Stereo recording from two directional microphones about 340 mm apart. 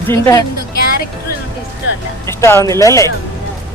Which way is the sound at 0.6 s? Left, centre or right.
Left.